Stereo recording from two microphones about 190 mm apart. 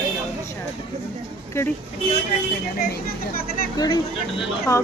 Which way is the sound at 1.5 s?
15° left (ahead or behind).